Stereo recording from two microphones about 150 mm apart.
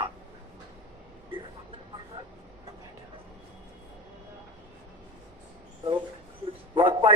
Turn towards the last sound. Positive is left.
turn(degrees=-35)  # may be behind; listen again after turning